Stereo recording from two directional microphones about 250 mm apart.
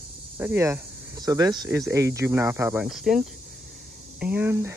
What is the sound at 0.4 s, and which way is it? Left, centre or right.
Speech, centre.